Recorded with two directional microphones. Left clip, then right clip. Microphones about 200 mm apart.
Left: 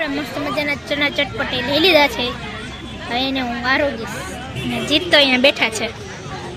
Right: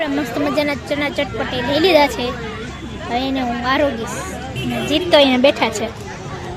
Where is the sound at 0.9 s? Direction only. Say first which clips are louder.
Left 1 dB; 5° right (ahead or behind).